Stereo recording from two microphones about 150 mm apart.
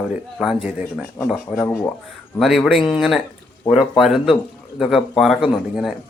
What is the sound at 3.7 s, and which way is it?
Speech, 35° left (ahead or behind).